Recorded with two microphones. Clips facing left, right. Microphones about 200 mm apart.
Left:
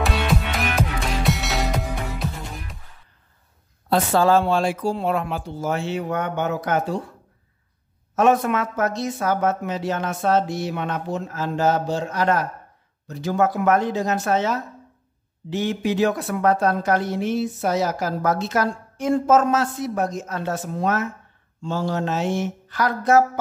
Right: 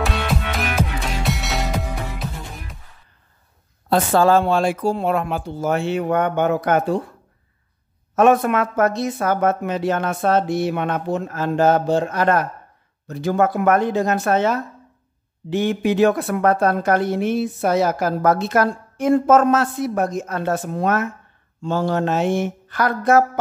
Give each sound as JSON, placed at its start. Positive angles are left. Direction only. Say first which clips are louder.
{"t": 0.0, "sound": "music", "louder": "even", "side_deg": 0}
{"t": 3.9, "sound": "a woman's voice", "louder": "right 2 dB", "side_deg": -50}
{"t": 8.2, "sound": "a woman's voice", "louder": "right 3 dB", "side_deg": -55}